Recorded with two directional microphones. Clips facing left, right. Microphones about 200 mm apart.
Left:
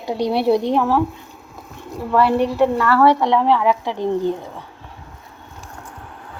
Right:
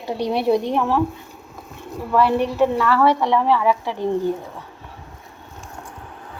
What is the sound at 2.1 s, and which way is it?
A woman's voice, 5° left (ahead or behind).